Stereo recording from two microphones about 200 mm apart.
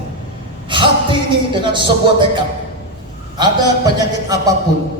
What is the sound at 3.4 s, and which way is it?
Speech, 20° right (ahead or behind).